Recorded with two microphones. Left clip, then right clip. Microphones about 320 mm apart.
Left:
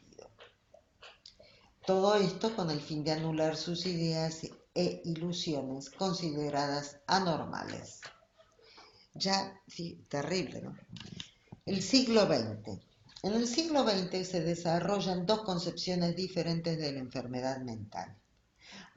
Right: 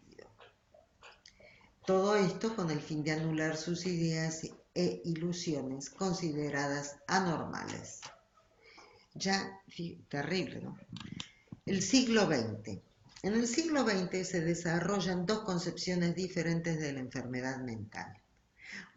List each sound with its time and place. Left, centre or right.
1.8 s speech: centre
9.1 s speech: centre